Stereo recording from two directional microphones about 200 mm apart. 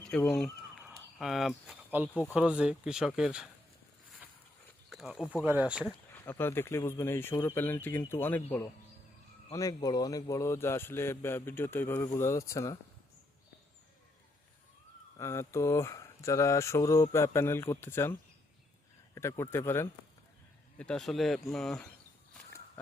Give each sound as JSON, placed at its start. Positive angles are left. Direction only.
{"t": 0.1, "sound": "a man's voice", "side_deg": 5}
{"t": 1.2, "sound": "speech", "side_deg": 0}
{"t": 4.9, "sound": "speech", "side_deg": 0}
{"t": 6.1, "sound": "a man's voice", "side_deg": 10}
{"t": 15.2, "sound": "a man's voice", "side_deg": 15}
{"t": 22.4, "sound": "a sound", "side_deg": 15}